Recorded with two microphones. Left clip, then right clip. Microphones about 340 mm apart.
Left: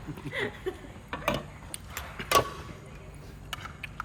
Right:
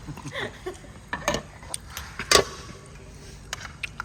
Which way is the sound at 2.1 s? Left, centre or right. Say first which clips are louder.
Right 5 dB; right.